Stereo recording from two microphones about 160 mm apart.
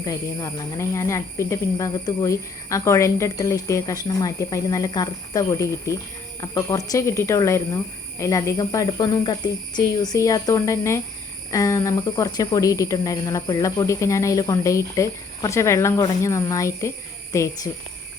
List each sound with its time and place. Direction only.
0.0 s speech: 20° left (ahead or behind)